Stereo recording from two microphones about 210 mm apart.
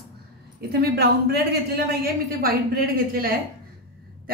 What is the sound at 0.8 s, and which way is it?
A woman's voice, 50° right (ahead or behind).